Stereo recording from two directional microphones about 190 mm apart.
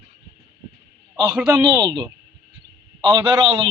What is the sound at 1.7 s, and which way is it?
A man's voice, 25° right (ahead or behind).